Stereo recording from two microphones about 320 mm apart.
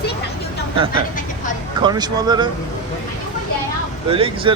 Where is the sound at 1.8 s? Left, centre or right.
Centre.